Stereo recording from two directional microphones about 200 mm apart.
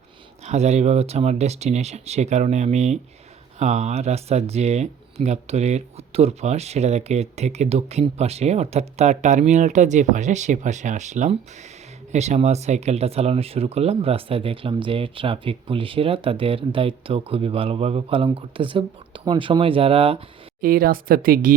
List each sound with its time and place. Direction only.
0.4 s speech: 35° right (ahead or behind)
20.6 s speech: 45° right (ahead or behind)